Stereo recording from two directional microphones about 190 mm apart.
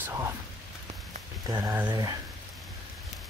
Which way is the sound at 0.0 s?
15° right (ahead or behind).